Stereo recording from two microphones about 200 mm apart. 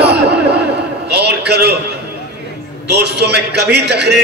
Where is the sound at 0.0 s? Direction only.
55° right (ahead or behind).